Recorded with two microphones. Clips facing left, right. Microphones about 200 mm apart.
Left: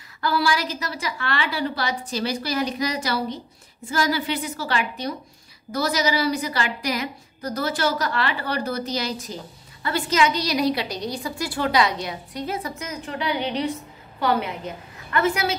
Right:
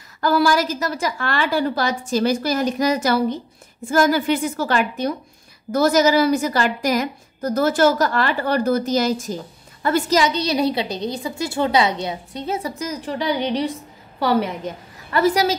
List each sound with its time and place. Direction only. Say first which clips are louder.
0.2 s a woman's voice: right 6 dB; 45° right (ahead or behind)
15.1 s a woman's voice: right 5 dB; 35° right (ahead or behind)